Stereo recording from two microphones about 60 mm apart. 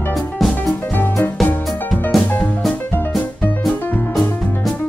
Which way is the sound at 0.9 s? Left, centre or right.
Left.